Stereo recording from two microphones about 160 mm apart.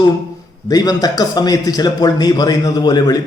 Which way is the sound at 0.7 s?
25° left (ahead or behind).